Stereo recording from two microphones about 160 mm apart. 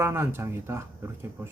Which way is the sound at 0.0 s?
15° right (ahead or behind).